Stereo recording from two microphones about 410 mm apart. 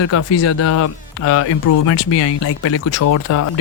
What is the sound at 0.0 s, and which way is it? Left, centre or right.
Speech, left.